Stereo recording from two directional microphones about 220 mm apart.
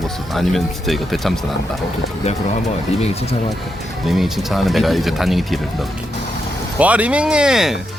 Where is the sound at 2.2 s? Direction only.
30° left (ahead or behind).